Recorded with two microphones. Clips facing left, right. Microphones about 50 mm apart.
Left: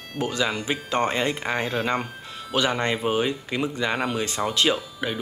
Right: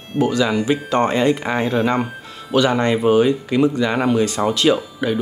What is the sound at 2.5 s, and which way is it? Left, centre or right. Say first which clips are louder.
Speech: right 7 dB; left.